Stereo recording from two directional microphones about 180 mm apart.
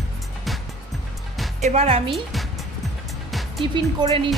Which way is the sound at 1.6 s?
35° right (ahead or behind).